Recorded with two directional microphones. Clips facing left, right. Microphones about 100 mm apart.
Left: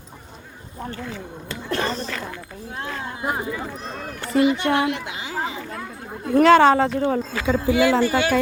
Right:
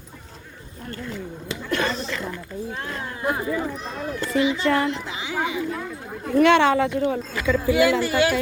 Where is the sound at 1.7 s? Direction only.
35° left (ahead or behind).